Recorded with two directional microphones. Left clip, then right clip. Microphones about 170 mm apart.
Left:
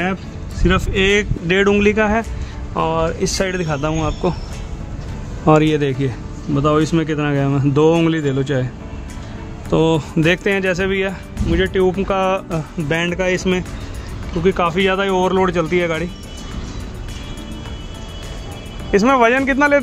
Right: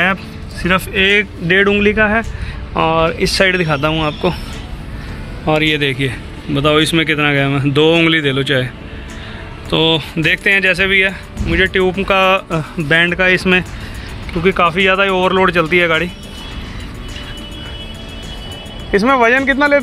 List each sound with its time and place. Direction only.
0.0 s music: 10° right (ahead or behind)
0.9 s speech: 20° left (ahead or behind)
2.7 s speech: 5° right (ahead or behind)
3.9 s speech: 5° left (ahead or behind)
5.5 s a man's voice: 45° left (ahead or behind); by 8.6 s 30° left (ahead or behind)
9.7 s a man's voice: 45° left (ahead or behind)
11.4 s speech: 15° left (ahead or behind); by 13.7 s 10° right (ahead or behind)
14.4 s speech: 5° left (ahead or behind)
18.9 s speech: 10° left (ahead or behind)